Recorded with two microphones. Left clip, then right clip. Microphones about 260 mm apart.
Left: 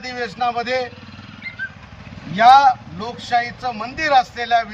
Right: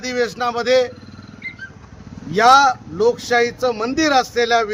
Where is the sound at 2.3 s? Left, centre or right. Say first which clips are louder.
Left 1 dB; right.